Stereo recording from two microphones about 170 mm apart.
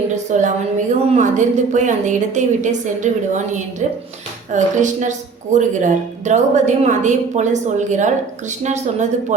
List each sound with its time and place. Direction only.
0.3 s a woman's voice: 45° right (ahead or behind)